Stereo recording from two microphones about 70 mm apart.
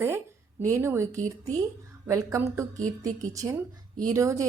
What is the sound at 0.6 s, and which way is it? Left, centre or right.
Speech, right.